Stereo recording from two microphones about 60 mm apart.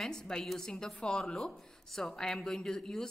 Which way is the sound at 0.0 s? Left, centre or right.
Centre.